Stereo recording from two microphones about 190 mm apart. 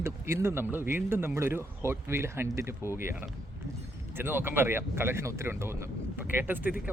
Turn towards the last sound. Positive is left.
turn(degrees=-10)  # may be behind; listen again after turning